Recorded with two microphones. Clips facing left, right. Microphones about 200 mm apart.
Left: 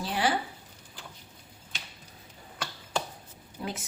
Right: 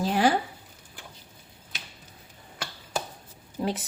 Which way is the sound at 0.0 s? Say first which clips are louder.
Right 6 dB; 45° right (ahead or behind).